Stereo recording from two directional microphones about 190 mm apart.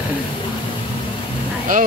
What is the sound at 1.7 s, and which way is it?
Speech, 45° right (ahead or behind).